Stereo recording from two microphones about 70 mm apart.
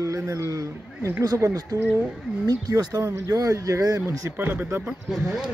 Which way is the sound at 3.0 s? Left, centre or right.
Right.